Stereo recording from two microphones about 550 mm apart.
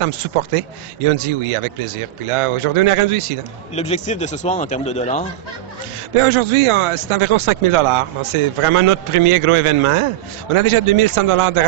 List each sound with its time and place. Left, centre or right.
0.0 s a man's voice: right
3.7 s a man's voice: centre
6.1 s a man's voice: right